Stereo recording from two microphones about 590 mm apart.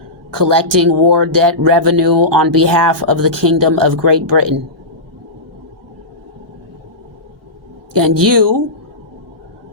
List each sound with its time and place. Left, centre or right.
0.3 s speech: right
7.9 s speech: right